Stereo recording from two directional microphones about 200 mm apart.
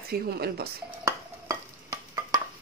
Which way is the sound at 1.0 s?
15° right (ahead or behind).